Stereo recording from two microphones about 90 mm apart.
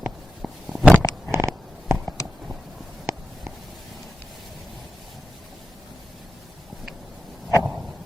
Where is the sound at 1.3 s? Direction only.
30° right (ahead or behind).